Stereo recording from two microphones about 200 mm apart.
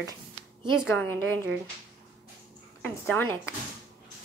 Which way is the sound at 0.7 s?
Centre (ahead or behind).